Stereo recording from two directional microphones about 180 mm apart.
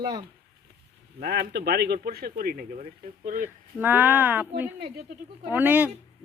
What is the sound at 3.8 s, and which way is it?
Speech, 10° right (ahead or behind).